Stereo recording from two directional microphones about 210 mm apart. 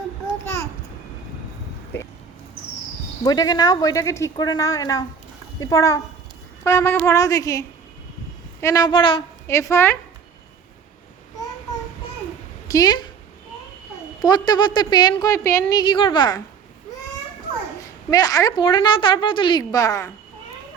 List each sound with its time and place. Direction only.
0.4 s babbling: 15° left (ahead or behind)
1.9 s a sound: 10° left (ahead or behind)
3.2 s speech: 15° left (ahead or behind)
8.6 s speech: 15° left (ahead or behind)
12.6 s a woman's voice: 20° left (ahead or behind)
14.2 s a woman's voice: 20° left (ahead or behind)
17.7 s a woman's voice: 15° left (ahead or behind)